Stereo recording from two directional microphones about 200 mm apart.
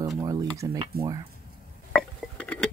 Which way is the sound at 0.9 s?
50° right (ahead or behind).